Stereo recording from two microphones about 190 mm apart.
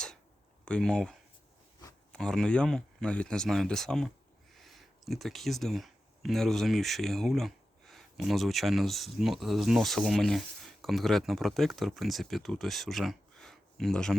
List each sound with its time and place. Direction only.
0.6 s speech: 5° left (ahead or behind)
2.1 s speech: 5° left (ahead or behind)